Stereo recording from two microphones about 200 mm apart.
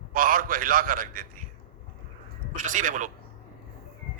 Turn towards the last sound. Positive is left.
turn(degrees=-40)  # may be behind; listen again after turning